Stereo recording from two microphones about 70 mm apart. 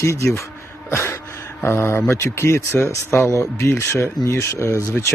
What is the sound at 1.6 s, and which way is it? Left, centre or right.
Speech, left.